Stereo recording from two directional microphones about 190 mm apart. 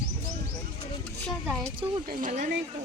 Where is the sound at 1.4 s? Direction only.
Centre (ahead or behind).